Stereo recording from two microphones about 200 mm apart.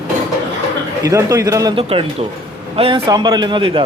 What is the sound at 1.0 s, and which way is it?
Speech, 15° right (ahead or behind).